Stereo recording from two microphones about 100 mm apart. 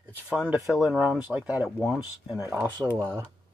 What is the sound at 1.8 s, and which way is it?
Speech, 5° right (ahead or behind).